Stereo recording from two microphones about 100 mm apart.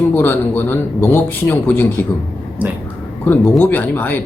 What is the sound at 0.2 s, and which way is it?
A man's voice, 20° left (ahead or behind).